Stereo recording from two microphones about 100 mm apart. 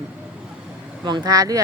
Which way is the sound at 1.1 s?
40° right (ahead or behind).